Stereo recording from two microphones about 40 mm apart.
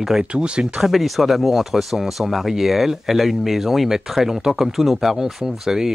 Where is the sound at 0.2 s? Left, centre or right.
Right.